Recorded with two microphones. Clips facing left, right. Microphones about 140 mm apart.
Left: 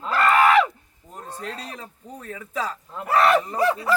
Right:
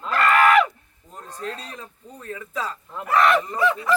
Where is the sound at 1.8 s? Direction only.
5° left (ahead or behind).